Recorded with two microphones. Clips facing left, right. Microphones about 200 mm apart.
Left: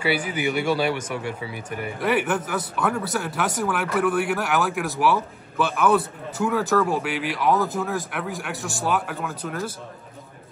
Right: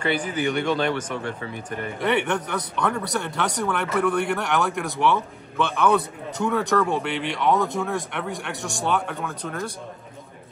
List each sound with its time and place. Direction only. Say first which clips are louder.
0.0 s speech: even; 10° left (ahead or behind)